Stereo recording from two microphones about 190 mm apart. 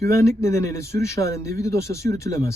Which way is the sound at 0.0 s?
15° left (ahead or behind).